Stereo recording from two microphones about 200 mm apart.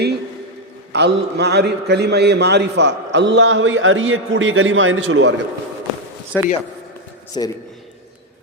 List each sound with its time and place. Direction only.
0.9 s a man's voice: 55° right (ahead or behind)
6.3 s speech: 10° left (ahead or behind)
7.3 s a man's voice: 25° left (ahead or behind)